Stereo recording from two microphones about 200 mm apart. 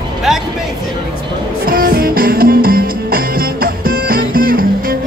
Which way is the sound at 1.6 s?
45° right (ahead or behind).